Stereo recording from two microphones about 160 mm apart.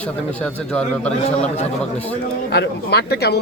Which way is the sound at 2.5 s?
90° left.